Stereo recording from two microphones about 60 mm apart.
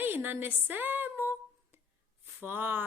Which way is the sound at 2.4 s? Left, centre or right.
Right.